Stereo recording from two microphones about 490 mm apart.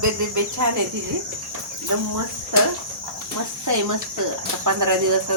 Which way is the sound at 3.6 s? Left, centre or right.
Right.